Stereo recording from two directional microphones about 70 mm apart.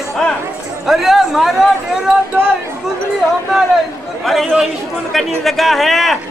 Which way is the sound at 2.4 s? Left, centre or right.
Right.